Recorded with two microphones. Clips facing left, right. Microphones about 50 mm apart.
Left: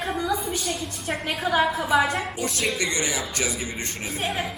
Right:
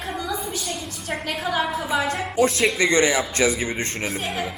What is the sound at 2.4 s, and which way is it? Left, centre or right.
Speech, right.